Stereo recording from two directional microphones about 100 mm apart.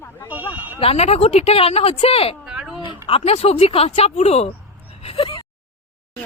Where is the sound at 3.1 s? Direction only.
80° left.